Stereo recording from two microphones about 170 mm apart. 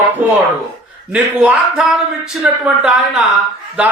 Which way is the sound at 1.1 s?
5° right (ahead or behind).